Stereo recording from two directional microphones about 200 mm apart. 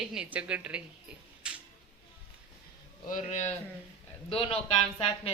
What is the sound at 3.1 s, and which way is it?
Speech, 40° left (ahead or behind).